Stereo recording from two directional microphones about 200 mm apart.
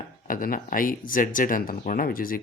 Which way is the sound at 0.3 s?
45° left (ahead or behind).